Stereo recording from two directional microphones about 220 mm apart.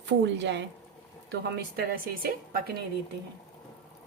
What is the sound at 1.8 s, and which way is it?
Speech, 40° right (ahead or behind).